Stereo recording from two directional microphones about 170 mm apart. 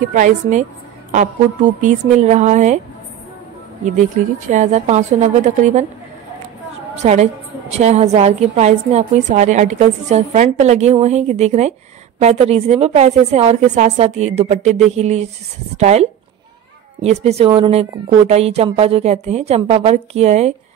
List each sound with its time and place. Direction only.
0.1 s a woman's voice: 50° right (ahead or behind)
4.2 s a woman's voice: 50° right (ahead or behind)
7.0 s a woman's voice: 40° right (ahead or behind)